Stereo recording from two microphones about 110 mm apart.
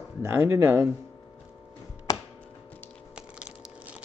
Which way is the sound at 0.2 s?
20° right (ahead or behind).